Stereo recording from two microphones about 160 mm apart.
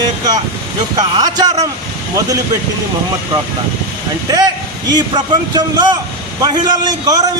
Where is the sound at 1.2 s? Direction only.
25° right (ahead or behind).